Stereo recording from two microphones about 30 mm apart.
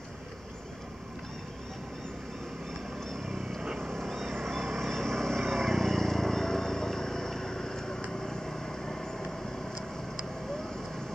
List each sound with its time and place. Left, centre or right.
3.6 s vehicle: centre
3.9 s vehicle: centre